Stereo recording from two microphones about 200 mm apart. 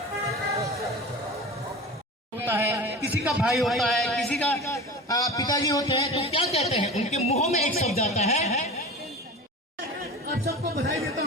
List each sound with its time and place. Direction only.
2.4 s a man's voice: 10° right (ahead or behind); by 6.1 s 15° left (ahead or behind)
6.2 s speech: 30° left (ahead or behind)
10.4 s a sound: 50° right (ahead or behind)